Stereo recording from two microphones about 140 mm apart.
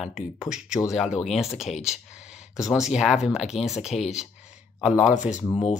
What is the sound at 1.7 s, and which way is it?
Speech, 50° left (ahead or behind).